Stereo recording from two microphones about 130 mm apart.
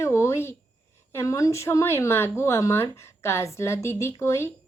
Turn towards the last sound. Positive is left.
turn(degrees=20)  # may be behind; listen again after turning